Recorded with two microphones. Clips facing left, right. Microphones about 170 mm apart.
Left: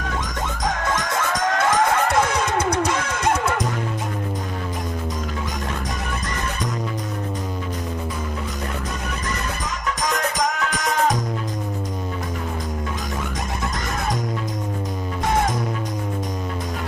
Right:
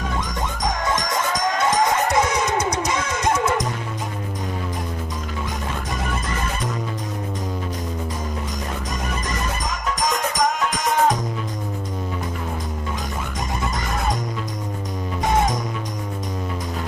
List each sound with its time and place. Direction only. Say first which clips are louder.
1.5 s music: left 1 dB; 55° left (ahead or behind)
9.8 s music: even; 65° left (ahead or behind)